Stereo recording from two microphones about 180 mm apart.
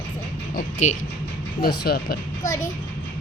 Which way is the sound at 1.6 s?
60° left (ahead or behind).